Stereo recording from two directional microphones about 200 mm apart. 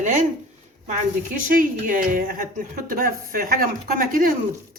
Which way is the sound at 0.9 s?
45° right (ahead or behind).